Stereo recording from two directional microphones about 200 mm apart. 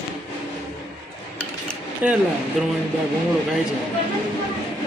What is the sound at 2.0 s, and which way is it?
Speech, 10° right (ahead or behind).